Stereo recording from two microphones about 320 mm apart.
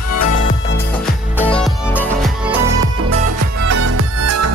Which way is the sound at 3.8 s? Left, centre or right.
Right.